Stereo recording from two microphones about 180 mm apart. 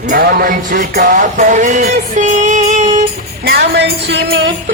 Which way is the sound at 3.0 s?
60° right (ahead or behind).